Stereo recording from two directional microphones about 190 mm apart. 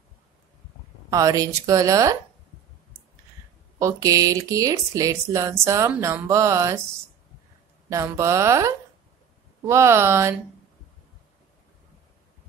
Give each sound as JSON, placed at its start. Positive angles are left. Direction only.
{"t": 1.1, "sound": "speech", "side_deg": -15}
{"t": 3.8, "sound": "speech", "side_deg": -15}
{"t": 7.9, "sound": "speech", "side_deg": -15}